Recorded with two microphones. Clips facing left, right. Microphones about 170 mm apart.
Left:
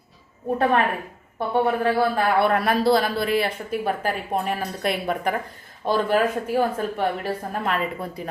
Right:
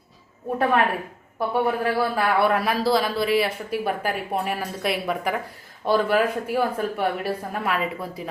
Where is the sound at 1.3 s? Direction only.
25° left (ahead or behind).